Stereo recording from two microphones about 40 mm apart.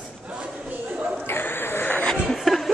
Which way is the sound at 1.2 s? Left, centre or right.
Left.